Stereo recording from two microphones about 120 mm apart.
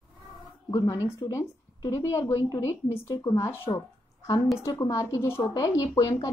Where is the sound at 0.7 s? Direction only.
30° left (ahead or behind).